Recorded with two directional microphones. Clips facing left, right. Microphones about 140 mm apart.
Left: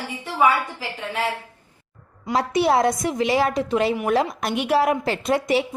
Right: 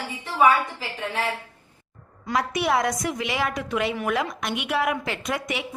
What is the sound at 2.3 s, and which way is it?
A woman's voice, 30° left (ahead or behind).